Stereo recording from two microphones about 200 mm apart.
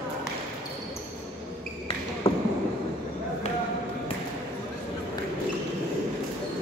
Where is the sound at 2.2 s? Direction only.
30° left (ahead or behind).